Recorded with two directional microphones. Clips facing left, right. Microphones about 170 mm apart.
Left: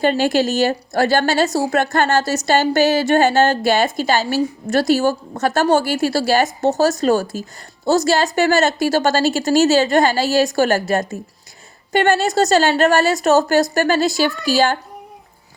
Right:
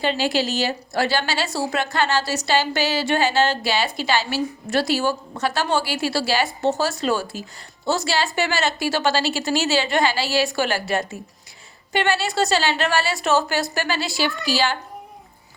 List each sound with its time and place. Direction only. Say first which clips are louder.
0.0 s a woman's voice: left 6 dB; 50° left (ahead or behind)